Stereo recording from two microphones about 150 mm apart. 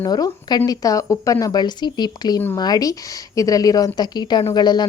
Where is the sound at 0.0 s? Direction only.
25° left (ahead or behind).